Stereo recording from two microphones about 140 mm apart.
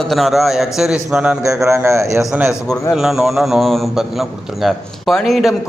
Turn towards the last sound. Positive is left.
turn(degrees=0)  # may be behind; listen again after turning